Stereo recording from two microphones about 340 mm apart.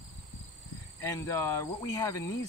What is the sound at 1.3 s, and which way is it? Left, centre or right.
Speech, centre.